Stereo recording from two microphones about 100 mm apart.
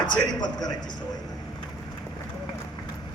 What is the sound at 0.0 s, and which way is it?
Speech, 45° left (ahead or behind).